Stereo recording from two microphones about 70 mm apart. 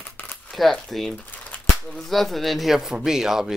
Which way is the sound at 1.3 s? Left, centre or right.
Left.